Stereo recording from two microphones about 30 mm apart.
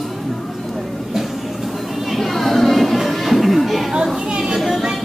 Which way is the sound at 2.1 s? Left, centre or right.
Centre.